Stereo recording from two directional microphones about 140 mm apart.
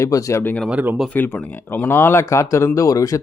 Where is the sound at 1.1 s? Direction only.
15° left (ahead or behind).